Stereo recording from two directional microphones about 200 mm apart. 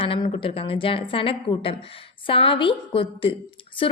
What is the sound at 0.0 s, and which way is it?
A woman's voice, 25° left (ahead or behind).